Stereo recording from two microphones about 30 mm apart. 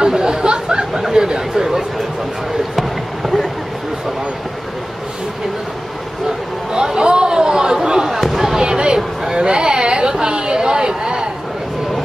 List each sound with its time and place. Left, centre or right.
0.0 s chatter: right
6.7 s chatter: right
8.1 s basketball bounce: centre
8.5 s a sound: right